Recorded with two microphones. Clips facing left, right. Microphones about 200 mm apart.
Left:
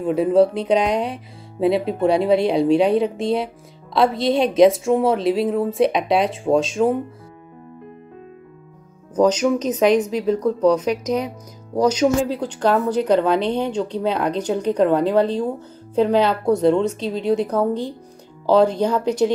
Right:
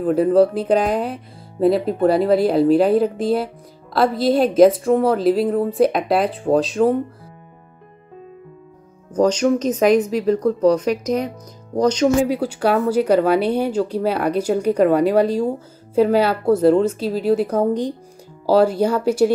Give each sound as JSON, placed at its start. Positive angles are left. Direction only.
{"t": 0.0, "sound": "a woman's voice", "side_deg": 0}
{"t": 9.3, "sound": "a woman's voice", "side_deg": 5}
{"t": 12.3, "sound": "speech", "side_deg": -10}
{"t": 17.6, "sound": "speech", "side_deg": -15}